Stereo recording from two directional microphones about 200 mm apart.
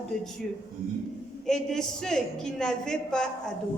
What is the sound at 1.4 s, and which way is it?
A woman's voice, 5° left (ahead or behind).